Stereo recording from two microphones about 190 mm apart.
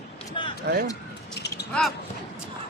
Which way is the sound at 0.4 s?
25° left (ahead or behind).